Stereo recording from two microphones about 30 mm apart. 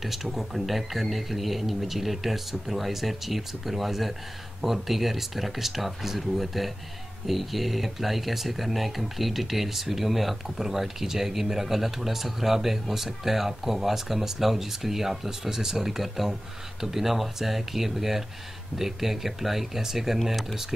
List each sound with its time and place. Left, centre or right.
0.0 s speech: centre